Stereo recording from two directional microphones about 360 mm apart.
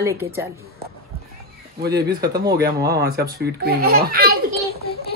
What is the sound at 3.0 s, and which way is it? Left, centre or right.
Speech, right.